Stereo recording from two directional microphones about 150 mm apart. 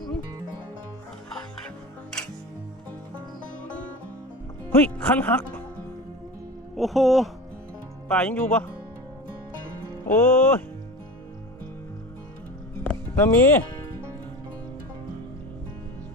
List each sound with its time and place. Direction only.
4.7 s speech: 15° left (ahead or behind)
6.7 s speech: centre (ahead or behind)
9.9 s music: 15° left (ahead or behind)
12.8 s music: 10° left (ahead or behind)